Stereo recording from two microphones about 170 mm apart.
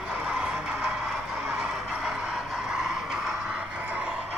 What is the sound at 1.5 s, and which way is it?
Vehicle, 5° right (ahead or behind).